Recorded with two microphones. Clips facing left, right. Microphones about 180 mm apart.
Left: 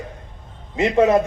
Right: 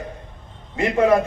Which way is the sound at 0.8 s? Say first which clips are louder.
Left 1 dB; 20° left (ahead or behind).